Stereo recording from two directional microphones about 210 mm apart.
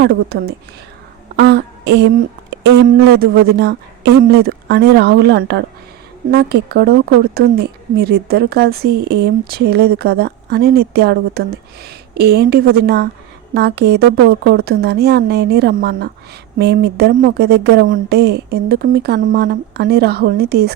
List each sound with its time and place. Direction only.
0.0 s speech: 50° right (ahead or behind)